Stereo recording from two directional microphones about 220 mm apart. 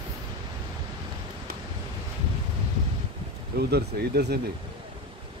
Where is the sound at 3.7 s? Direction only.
45° right (ahead or behind).